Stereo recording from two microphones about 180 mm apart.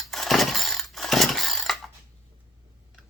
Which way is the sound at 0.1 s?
Centre (ahead or behind).